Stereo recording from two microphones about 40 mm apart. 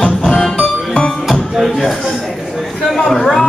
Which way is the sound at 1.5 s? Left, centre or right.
Centre.